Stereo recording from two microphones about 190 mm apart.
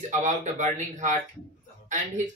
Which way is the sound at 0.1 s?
40° right (ahead or behind).